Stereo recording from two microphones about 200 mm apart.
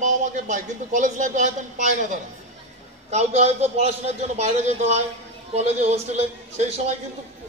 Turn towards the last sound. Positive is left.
turn(degrees=-35)  # may be behind; listen again after turning